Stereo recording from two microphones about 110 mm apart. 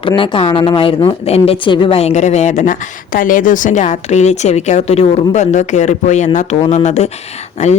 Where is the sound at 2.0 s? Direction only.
80° left.